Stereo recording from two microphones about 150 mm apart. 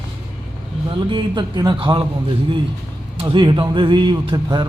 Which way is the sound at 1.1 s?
30° right (ahead or behind).